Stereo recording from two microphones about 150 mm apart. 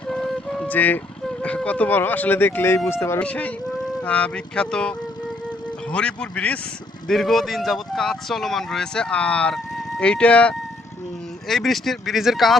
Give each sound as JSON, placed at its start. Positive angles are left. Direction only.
{"t": 0.1, "sound": "speech", "side_deg": 5}